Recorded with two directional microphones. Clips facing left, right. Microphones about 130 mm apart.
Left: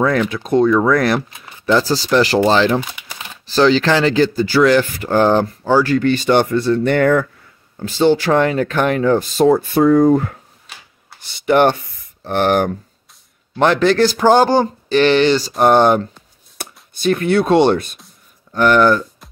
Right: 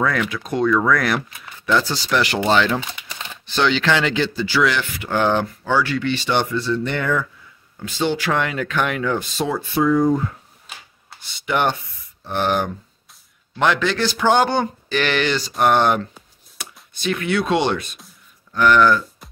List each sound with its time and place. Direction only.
0.0 s speech: 30° left (ahead or behind); by 7.2 s 55° left (ahead or behind)
7.8 s speech: 35° left (ahead or behind); by 10.3 s 65° left (ahead or behind)
11.4 s speech: 45° left (ahead or behind)
12.3 s speech: 60° left (ahead or behind)
13.6 s speech: 40° left (ahead or behind)